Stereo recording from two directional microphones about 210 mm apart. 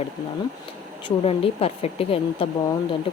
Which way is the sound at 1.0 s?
25° left (ahead or behind).